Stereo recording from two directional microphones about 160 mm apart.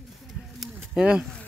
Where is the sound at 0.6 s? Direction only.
5° right (ahead or behind).